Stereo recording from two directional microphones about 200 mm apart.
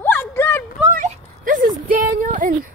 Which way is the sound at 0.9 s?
40° right (ahead or behind).